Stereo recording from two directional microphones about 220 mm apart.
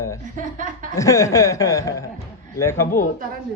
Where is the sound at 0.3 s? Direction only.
35° right (ahead or behind).